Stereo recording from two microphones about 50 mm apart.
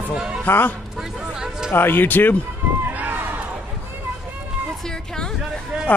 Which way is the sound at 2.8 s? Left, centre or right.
Right.